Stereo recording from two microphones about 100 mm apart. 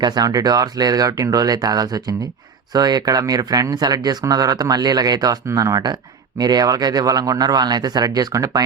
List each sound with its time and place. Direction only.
0.0 s speech: 45° right (ahead or behind)